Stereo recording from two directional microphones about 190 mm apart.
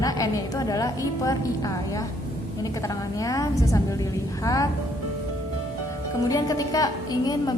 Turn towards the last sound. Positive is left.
turn(degrees=20)  # may be behind; listen again after turning